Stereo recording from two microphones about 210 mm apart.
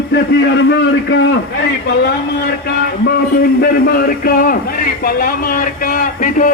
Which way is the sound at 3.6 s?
45° left (ahead or behind).